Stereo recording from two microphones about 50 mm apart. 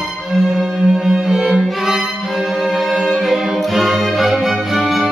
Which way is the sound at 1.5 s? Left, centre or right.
Centre.